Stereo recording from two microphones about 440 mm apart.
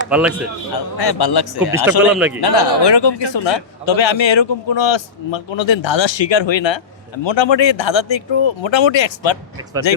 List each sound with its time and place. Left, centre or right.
0.1 s a man's voice: centre
0.7 s a man's voice: left
2.0 s a man's voice: centre
2.4 s a man's voice: left